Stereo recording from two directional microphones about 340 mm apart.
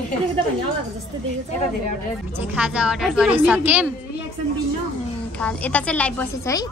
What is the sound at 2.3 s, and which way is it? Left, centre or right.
A woman's voice, centre.